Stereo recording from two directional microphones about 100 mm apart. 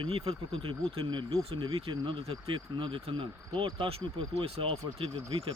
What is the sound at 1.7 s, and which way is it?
Speech, 65° right (ahead or behind).